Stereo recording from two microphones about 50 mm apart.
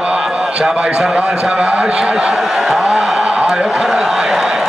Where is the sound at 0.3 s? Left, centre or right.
Right.